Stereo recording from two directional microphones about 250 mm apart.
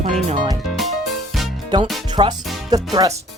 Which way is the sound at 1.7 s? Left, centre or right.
Centre.